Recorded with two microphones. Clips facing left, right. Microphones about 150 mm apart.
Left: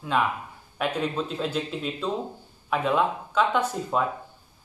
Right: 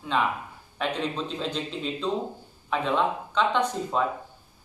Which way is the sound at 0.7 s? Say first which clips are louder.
Left 2 dB; 5° left (ahead or behind).